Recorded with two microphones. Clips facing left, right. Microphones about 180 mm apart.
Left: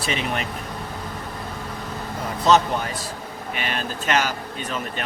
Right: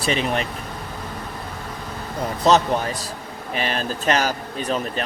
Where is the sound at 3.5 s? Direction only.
35° right (ahead or behind).